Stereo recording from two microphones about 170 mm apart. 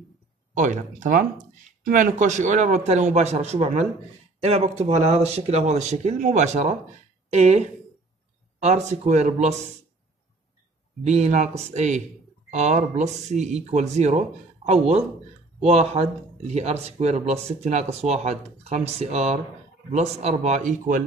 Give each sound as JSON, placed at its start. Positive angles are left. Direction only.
{"t": 0.6, "sound": "a man's voice", "side_deg": -45}
{"t": 8.6, "sound": "speech", "side_deg": -40}
{"t": 11.1, "sound": "speech", "side_deg": -40}